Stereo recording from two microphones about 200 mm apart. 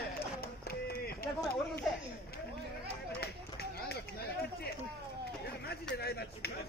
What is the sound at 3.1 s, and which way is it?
Run, 50° left (ahead or behind).